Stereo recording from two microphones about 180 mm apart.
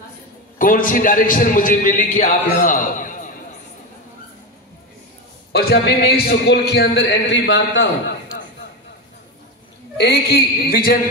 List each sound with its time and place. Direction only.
0.6 s a man's voice: 50° left (ahead or behind)
5.5 s a man's voice: 60° left (ahead or behind); by 7.9 s 85° left
9.9 s a man's voice: 65° left (ahead or behind)